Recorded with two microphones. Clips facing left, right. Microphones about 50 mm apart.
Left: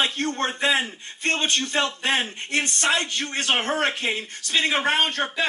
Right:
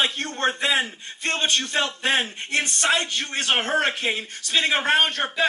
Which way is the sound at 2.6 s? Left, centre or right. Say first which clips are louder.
Even; left.